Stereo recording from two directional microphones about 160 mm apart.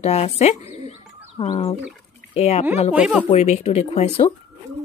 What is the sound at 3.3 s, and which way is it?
Speech, 45° left (ahead or behind).